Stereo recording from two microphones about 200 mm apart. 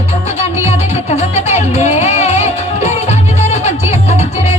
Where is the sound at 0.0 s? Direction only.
30° left (ahead or behind).